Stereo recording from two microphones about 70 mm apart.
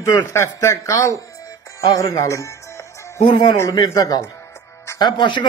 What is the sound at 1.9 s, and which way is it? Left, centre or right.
Music, left.